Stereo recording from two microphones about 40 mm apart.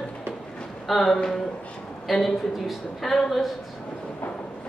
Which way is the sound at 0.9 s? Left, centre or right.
Centre.